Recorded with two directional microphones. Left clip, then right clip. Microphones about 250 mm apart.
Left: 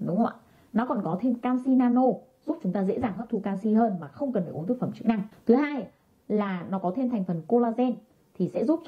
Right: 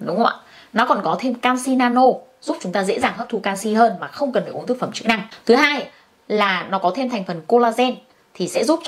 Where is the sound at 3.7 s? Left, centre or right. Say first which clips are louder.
Right 10 dB; centre.